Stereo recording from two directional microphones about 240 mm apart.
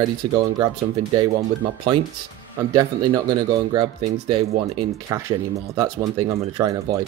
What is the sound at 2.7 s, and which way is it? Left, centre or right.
Speech, centre.